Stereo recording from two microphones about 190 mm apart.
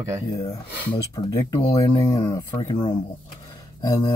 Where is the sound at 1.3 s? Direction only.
20° left (ahead or behind).